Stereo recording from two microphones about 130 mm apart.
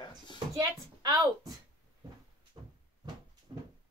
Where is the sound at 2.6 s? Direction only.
35° right (ahead or behind).